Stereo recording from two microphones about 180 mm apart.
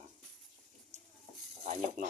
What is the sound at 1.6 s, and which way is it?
Speech, 40° right (ahead or behind).